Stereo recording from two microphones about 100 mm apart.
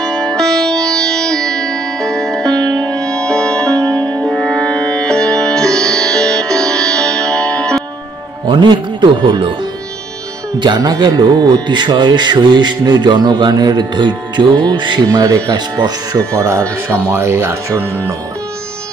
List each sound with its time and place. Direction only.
0.0 s music: 5° left (ahead or behind)
8.5 s speech: 50° right (ahead or behind)
10.6 s speech: 45° right (ahead or behind)
16.3 s speech: 25° right (ahead or behind)